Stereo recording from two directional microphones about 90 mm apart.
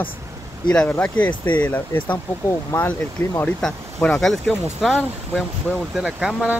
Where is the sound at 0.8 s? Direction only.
15° left (ahead or behind).